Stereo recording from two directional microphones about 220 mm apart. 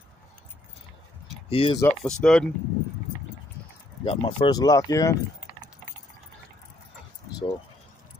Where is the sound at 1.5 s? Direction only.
25° left (ahead or behind).